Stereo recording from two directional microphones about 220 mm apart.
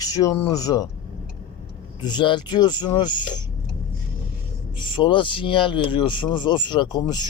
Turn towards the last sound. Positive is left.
turn(degrees=20)  # may be behind; listen again after turning